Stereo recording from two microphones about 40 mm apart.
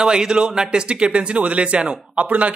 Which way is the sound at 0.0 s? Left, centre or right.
Centre.